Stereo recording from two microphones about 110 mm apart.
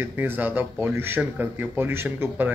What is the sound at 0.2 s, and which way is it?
Speech, 15° right (ahead or behind).